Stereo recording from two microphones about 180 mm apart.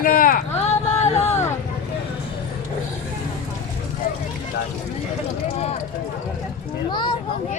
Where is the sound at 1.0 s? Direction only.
35° left (ahead or behind).